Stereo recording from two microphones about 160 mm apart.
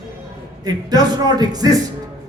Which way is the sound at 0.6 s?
25° right (ahead or behind).